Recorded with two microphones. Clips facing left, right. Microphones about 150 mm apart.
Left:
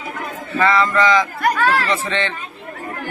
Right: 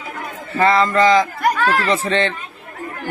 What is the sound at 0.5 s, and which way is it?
Speech, 35° right (ahead or behind).